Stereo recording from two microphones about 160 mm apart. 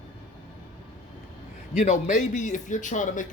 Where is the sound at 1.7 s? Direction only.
45° left (ahead or behind).